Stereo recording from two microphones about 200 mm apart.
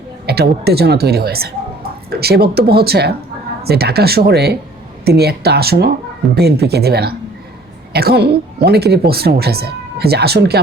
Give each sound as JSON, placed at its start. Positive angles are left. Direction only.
{"t": 0.3, "sound": "speech", "side_deg": -50}